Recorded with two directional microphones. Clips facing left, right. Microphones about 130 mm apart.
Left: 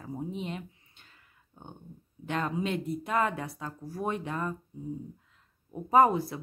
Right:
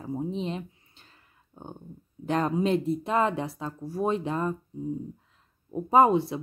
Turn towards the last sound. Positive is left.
turn(degrees=-25)  # may be behind; listen again after turning